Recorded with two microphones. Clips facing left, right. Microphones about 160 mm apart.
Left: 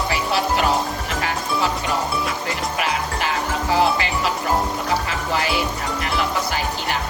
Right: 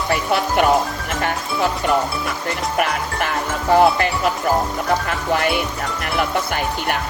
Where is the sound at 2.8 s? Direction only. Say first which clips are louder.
Right 4 dB; 55° right (ahead or behind).